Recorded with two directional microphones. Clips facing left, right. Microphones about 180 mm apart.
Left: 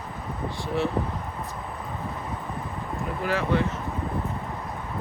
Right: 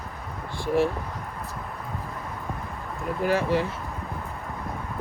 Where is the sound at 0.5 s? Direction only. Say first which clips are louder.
Right 5 dB; 50° right (ahead or behind).